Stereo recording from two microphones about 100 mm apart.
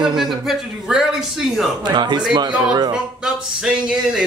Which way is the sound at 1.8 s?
50° right (ahead or behind).